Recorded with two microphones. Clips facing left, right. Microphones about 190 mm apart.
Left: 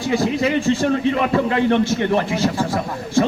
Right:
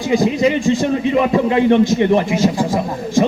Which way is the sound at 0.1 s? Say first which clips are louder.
Right 4 dB; 15° right (ahead or behind).